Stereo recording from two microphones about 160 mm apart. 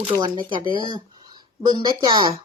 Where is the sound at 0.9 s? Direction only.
30° right (ahead or behind).